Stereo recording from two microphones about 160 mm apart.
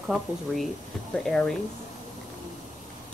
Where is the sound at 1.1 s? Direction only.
5° left (ahead or behind).